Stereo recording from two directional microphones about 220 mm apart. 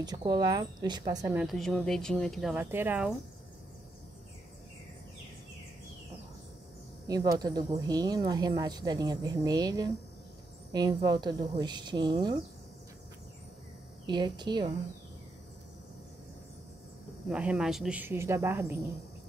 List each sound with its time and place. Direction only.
0.0 s speech: 20° right (ahead or behind)
1.4 s speech: centre (ahead or behind)
7.1 s speech: 15° right (ahead or behind)
14.0 s speech: 20° right (ahead or behind)
17.3 s speech: 5° right (ahead or behind)